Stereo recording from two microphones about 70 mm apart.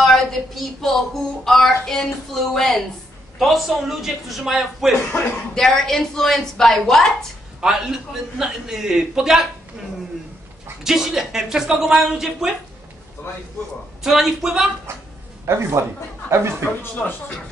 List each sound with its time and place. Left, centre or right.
0.0 s a man's voice: centre
5.5 s a woman's voice: centre
7.6 s a man's voice: centre
10.8 s a man's voice: centre
13.2 s a man's voice: left
14.0 s a man's voice: centre
15.5 s a woman's voice: right